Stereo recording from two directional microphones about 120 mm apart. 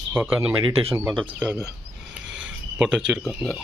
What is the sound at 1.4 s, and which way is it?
Speech, 15° left (ahead or behind).